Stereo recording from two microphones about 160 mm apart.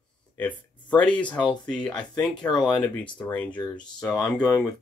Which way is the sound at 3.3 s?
10° left (ahead or behind).